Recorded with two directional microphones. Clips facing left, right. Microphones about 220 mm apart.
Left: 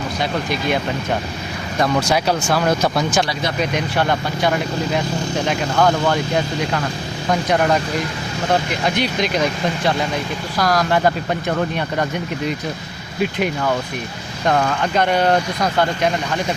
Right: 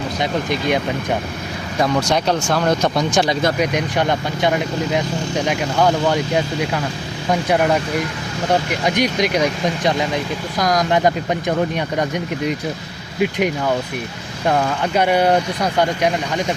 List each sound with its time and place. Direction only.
0.2 s speech: 20° right (ahead or behind)
1.8 s speech: 5° left (ahead or behind)
3.6 s speech: 15° right (ahead or behind)
13.2 s speech: 15° right (ahead or behind)